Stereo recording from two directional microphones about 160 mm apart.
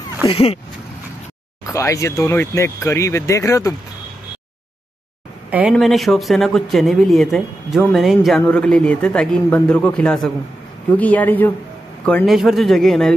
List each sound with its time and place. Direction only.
0.3 s speech: 35° left (ahead or behind)
1.7 s speech: 20° left (ahead or behind)
5.5 s speech: 10° right (ahead or behind)
5.8 s speech: centre (ahead or behind)